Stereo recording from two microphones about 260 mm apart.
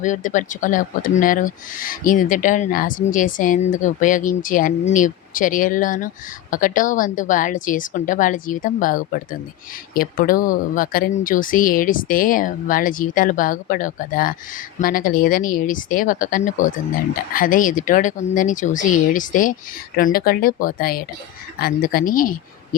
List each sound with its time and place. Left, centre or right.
0.0 s speech: left